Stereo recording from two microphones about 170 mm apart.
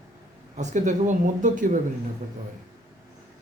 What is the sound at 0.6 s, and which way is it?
Speech, 45° right (ahead or behind).